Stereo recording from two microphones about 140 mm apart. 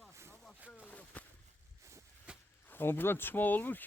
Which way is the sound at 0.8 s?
10° left (ahead or behind).